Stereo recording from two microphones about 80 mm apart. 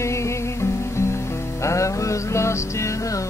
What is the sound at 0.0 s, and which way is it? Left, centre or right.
Music, left.